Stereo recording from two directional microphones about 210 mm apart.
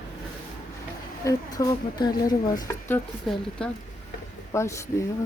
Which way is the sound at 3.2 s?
Centre (ahead or behind).